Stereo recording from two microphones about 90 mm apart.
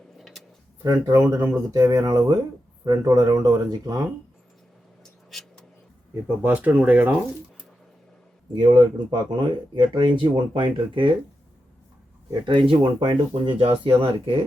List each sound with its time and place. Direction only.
0.2 s a sound: centre (ahead or behind)
1.1 s speech: 30° right (ahead or behind)
1.7 s speech: 45° right (ahead or behind)
5.3 s a sound: centre (ahead or behind)
6.2 s speech: 20° right (ahead or behind)
8.5 s speech: 55° right (ahead or behind)
12.5 s speech: 65° right (ahead or behind)